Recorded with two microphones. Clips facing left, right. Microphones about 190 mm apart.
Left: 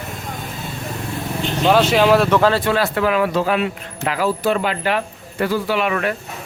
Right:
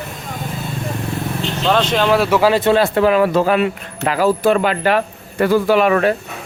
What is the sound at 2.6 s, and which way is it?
Speech, 25° right (ahead or behind).